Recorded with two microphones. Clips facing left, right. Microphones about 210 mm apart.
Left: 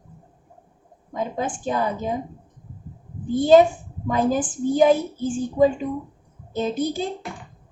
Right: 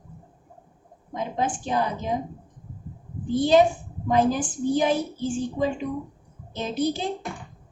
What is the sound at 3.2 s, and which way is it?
A woman's voice, 45° left (ahead or behind).